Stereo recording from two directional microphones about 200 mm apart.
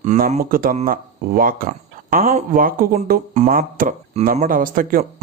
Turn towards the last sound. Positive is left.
turn(degrees=-45)  # may be behind; listen again after turning